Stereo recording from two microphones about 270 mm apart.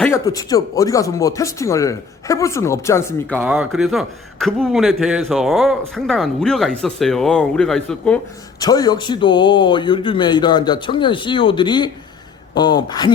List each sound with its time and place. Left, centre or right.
0.0 s speech: centre
8.5 s speech: centre